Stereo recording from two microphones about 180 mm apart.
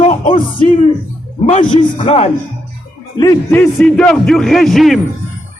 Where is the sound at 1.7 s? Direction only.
35° left (ahead or behind).